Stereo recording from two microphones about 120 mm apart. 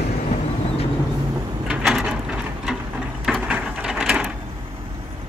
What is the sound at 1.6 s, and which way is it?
Drawer open or close, 5° right (ahead or behind).